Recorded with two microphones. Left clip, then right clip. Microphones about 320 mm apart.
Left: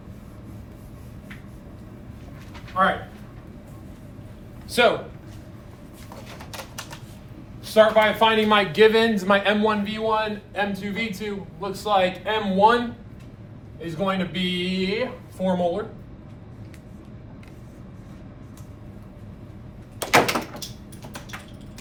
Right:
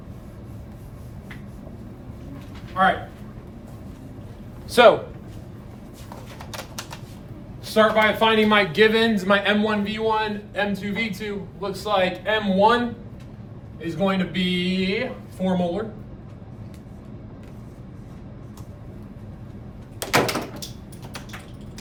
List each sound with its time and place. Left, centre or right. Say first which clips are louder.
2.8 s speech: right 1 dB; centre
4.7 s speech: right 5 dB; centre
7.7 s a man's voice: left 1 dB; centre
13.8 s a man's voice: right 2 dB; centre
20.0 s door: left 3 dB; left